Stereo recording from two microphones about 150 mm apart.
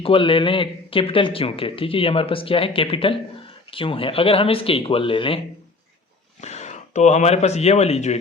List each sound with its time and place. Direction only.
0.0 s a man's voice: 35° left (ahead or behind)
6.4 s speech: 50° left (ahead or behind)